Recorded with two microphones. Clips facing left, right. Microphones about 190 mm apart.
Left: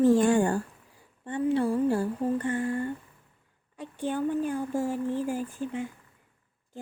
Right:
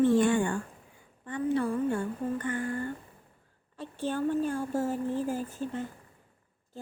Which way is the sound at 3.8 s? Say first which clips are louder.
Left 1 dB; 15° left (ahead or behind).